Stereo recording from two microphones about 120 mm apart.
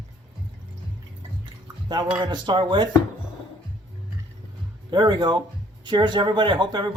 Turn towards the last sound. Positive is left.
turn(degrees=-40)  # may be behind; listen again after turning